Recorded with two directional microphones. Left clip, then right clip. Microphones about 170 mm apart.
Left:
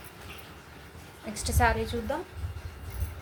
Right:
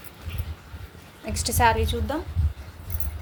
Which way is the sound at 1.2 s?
40° right (ahead or behind).